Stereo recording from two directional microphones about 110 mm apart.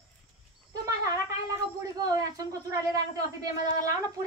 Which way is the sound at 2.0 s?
35° right (ahead or behind).